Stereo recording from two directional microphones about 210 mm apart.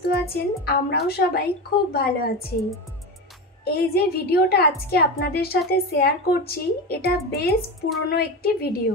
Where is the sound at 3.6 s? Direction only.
50° left (ahead or behind).